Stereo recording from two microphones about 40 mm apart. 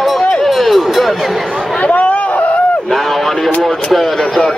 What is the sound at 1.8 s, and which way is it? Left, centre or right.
Chatter, left.